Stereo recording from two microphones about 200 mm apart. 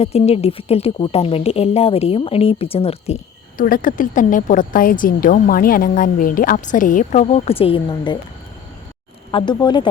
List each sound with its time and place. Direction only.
0.0 s speech: 30° left (ahead or behind)
3.6 s a woman's voice: 45° left (ahead or behind); by 8.2 s 20° left (ahead or behind)
9.3 s speech: 20° left (ahead or behind)